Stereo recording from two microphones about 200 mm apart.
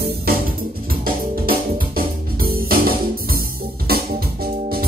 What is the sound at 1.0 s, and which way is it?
Music, 45° right (ahead or behind).